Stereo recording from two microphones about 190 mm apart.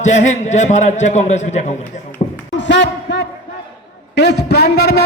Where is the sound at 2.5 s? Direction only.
70° left (ahead or behind).